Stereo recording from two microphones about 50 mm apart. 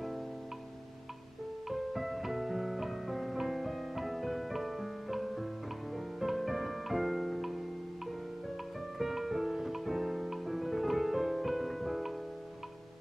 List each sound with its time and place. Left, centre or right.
1.7 s music: centre
8.9 s music: centre